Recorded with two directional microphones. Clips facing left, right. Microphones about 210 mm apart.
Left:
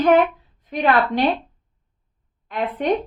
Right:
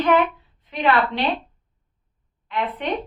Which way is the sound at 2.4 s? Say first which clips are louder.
Left 3 dB; 45° left (ahead or behind).